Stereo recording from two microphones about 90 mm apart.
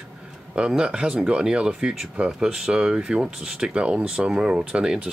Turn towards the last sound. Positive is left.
turn(degrees=-10)  # may be behind; listen again after turning